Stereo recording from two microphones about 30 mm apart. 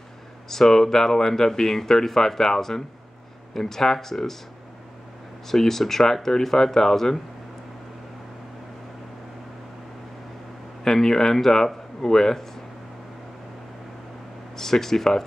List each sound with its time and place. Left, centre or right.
0.5 s speech: centre
5.5 s speech: centre
10.8 s speech: centre
14.6 s speech: centre